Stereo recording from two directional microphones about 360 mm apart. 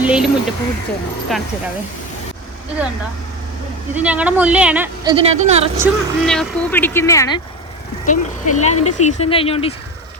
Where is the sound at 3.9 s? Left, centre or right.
Centre.